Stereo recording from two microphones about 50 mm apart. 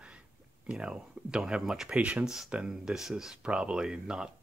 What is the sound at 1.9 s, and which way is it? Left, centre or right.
Speech, right.